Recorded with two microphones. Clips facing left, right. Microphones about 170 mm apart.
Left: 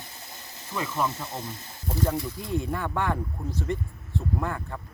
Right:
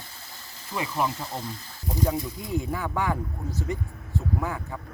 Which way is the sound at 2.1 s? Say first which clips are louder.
Even; centre (ahead or behind).